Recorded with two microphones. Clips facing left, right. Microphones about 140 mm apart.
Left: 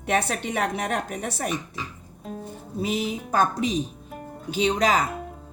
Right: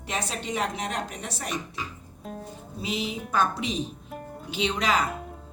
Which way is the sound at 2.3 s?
Centre (ahead or behind).